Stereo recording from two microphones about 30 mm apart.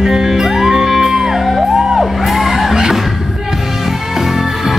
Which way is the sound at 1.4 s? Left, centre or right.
Centre.